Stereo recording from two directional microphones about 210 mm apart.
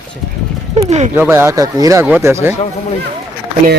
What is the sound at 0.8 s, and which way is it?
Speech, 30° right (ahead or behind).